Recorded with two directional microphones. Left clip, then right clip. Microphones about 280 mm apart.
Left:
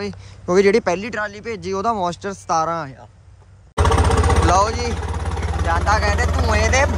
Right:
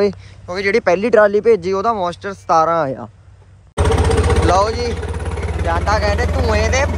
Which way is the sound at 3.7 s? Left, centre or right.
Centre.